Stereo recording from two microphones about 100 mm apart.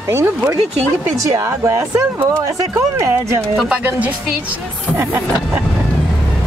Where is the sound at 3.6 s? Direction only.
15° right (ahead or behind).